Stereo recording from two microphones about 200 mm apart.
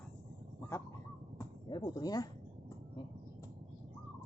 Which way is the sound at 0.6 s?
15° left (ahead or behind).